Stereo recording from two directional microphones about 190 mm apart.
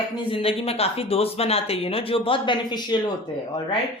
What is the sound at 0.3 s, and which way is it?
Speech, 30° left (ahead or behind).